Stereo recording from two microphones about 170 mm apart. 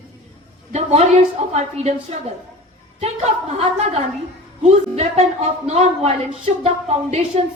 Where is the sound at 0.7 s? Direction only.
40° right (ahead or behind).